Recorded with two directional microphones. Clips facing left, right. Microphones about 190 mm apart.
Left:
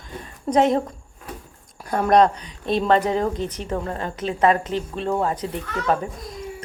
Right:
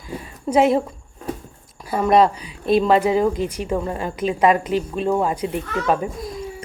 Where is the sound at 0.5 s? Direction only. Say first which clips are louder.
Right 2 dB; 5° right (ahead or behind).